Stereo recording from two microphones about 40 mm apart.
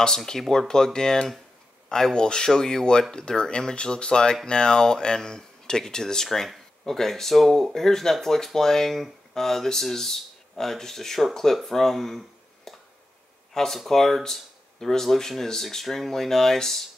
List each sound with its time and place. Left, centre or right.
0.0 s speech: centre
12.7 s a sound: centre
13.5 s speech: centre